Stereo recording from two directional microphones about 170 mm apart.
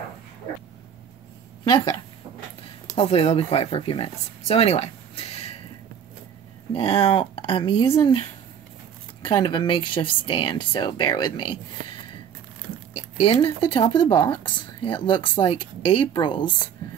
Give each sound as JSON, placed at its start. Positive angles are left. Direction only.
{"t": 2.9, "sound": "speech", "side_deg": 35}
{"t": 6.7, "sound": "speech", "side_deg": 35}